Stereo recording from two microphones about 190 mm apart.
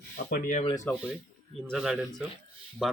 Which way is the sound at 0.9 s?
10° left (ahead or behind).